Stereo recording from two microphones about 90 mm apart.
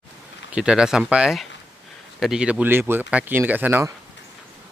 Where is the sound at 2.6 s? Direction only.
25° right (ahead or behind).